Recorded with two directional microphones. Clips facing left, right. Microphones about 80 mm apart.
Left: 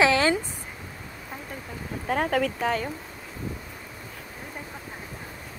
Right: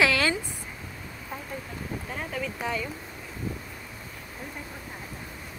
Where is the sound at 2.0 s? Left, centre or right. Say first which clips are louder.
Left 12 dB; left.